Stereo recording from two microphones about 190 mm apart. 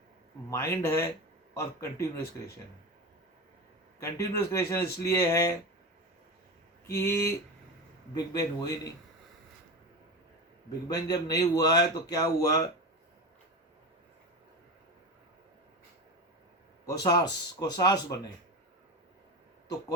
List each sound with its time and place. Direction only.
0.5 s speech: 15° left (ahead or behind)
4.0 s speech: 15° left (ahead or behind)
6.9 s speech: 15° left (ahead or behind)
10.7 s speech: 20° left (ahead or behind)
16.8 s speech: 20° left (ahead or behind)